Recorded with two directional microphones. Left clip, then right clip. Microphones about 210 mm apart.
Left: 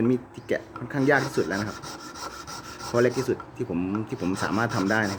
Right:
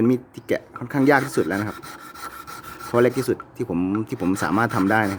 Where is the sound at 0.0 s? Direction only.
45° right (ahead or behind).